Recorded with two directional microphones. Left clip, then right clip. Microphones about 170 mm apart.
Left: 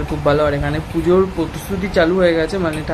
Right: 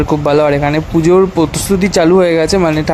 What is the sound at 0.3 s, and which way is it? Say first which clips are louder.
Speech: right 4 dB; 40° right (ahead or behind).